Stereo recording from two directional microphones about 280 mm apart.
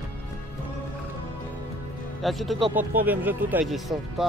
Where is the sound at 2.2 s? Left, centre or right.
Centre.